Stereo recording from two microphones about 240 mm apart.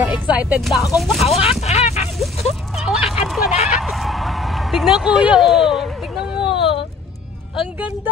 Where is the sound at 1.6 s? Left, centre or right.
Left.